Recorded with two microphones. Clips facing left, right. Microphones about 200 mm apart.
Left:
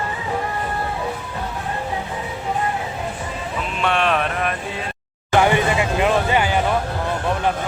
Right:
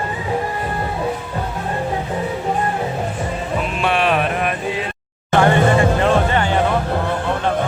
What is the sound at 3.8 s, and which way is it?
Music, 5° right (ahead or behind).